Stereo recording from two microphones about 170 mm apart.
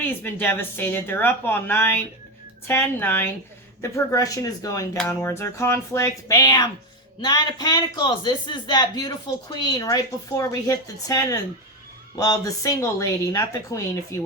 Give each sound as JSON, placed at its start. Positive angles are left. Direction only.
{"t": 0.0, "sound": "speech", "side_deg": 10}